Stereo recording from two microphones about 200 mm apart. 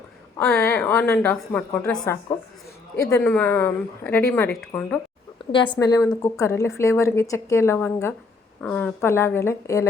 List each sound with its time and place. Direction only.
0.3 s speech: 10° left (ahead or behind)
5.4 s a sound: 25° left (ahead or behind)
5.8 s speech: 20° left (ahead or behind)